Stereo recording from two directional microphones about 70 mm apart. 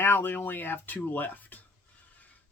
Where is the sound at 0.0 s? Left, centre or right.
Left.